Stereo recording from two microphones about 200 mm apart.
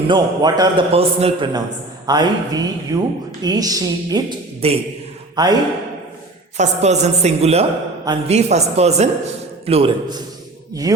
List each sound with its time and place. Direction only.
0.1 s speech: 20° right (ahead or behind)
4.6 s speech: 30° right (ahead or behind)
6.6 s a man's voice: 35° right (ahead or behind); by 11.0 s 20° right (ahead or behind)